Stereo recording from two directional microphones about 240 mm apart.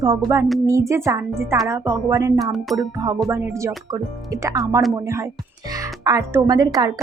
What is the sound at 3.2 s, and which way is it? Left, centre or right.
Speech, centre.